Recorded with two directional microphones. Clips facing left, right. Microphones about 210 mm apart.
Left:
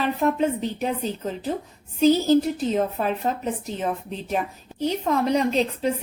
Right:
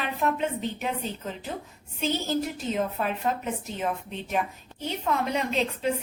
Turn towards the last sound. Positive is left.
turn(degrees=40)  # may be behind; listen again after turning